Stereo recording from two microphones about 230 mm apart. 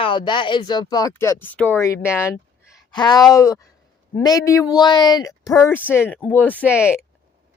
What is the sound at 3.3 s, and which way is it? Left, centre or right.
A woman's voice, centre.